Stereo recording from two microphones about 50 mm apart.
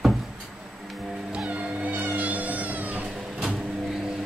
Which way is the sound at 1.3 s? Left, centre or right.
Right.